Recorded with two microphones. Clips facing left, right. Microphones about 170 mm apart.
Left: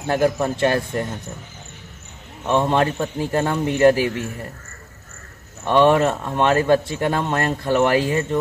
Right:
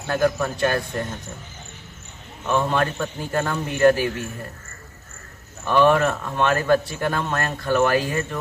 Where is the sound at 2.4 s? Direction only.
25° left (ahead or behind).